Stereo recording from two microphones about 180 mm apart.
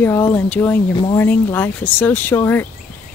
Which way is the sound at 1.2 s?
10° left (ahead or behind).